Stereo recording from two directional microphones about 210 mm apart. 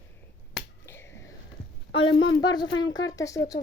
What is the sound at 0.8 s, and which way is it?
Finger snapping, 10° left (ahead or behind).